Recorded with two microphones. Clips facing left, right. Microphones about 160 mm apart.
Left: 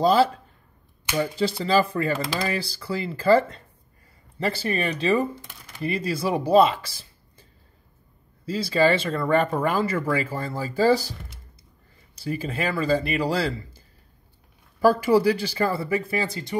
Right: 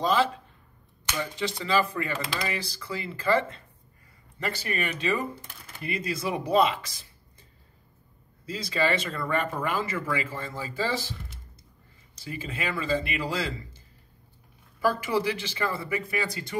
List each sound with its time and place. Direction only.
0.0 s speech: 35° left (ahead or behind)
8.5 s speech: 30° left (ahead or behind)
12.3 s speech: 35° left (ahead or behind)